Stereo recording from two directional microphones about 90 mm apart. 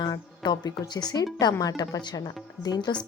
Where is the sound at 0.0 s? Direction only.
55° left (ahead or behind).